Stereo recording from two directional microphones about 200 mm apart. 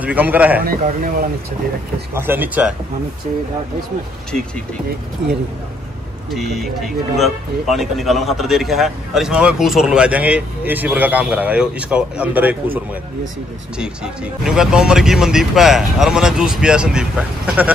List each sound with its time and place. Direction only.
0.0 s a man's voice: 10° right (ahead or behind)
0.7 s speech: 45° right (ahead or behind)
2.1 s a man's voice: 10° right (ahead or behind)
6.3 s speech: centre (ahead or behind)